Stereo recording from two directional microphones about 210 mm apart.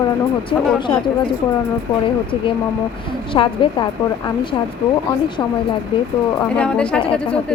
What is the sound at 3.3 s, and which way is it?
Speech, 25° left (ahead or behind).